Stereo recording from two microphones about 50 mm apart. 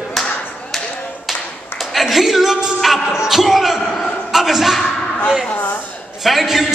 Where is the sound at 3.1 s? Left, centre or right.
Centre.